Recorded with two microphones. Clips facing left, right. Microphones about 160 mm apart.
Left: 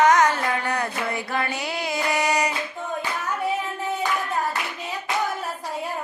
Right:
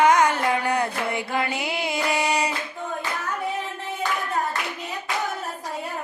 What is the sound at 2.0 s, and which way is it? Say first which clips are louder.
Child singing: left 1 dB; 30° right (ahead or behind).